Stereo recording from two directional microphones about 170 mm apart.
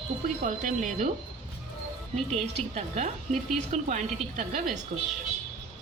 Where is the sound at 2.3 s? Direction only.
40° right (ahead or behind).